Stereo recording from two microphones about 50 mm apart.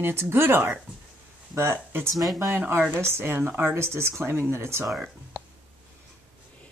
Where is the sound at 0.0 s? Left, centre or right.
Right.